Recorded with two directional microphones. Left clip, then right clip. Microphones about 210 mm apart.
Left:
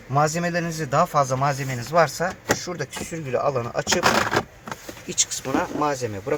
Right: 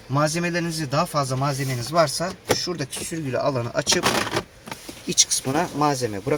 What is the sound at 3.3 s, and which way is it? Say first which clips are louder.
Speech: left 1 dB; 50° right (ahead or behind).